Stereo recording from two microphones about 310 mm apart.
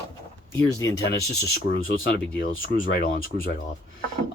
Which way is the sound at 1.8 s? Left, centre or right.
Left.